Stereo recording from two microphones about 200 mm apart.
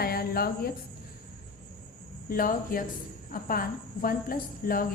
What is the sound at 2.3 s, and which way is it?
A woman's voice, 45° left (ahead or behind).